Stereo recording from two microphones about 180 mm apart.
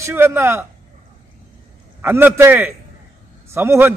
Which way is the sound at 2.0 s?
10° right (ahead or behind).